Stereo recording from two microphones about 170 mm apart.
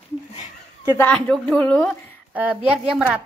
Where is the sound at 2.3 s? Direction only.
5° right (ahead or behind).